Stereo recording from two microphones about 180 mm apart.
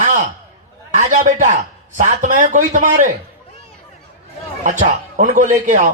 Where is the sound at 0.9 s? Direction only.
45° right (ahead or behind).